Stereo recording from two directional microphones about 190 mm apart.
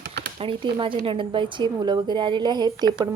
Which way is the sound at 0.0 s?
60° right (ahead or behind).